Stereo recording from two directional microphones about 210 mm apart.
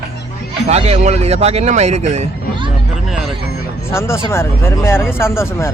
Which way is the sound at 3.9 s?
10° left (ahead or behind).